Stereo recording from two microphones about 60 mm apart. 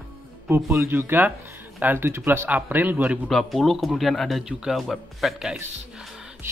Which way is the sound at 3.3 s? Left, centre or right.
Centre.